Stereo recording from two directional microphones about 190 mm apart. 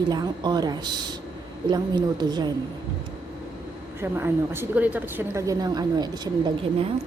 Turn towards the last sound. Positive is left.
turn(degrees=-25)  # may be behind; listen again after turning